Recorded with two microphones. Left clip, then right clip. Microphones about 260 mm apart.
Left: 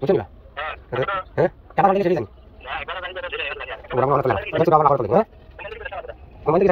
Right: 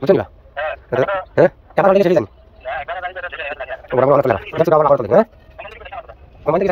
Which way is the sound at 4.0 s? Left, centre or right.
Right.